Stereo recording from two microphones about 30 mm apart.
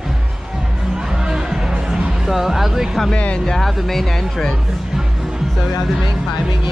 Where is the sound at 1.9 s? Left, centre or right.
Centre.